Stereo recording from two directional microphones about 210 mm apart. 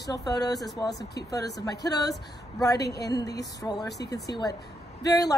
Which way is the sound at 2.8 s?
50° left (ahead or behind).